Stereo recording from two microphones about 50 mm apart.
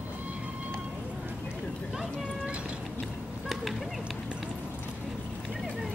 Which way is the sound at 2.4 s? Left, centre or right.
Right.